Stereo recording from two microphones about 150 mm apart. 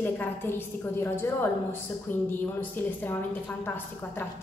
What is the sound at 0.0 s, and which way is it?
A woman's voice, 15° left (ahead or behind).